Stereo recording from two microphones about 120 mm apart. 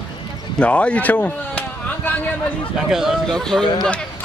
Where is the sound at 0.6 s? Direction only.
10° left (ahead or behind).